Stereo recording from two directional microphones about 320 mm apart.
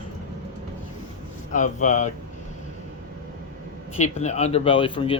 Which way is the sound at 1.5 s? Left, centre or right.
Left.